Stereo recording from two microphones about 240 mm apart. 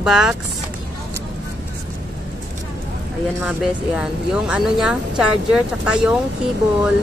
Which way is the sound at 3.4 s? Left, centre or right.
Centre.